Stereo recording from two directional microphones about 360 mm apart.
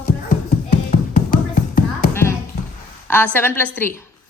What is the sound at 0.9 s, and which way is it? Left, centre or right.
Tap, left.